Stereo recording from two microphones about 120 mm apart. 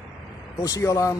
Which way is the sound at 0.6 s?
30° left (ahead or behind).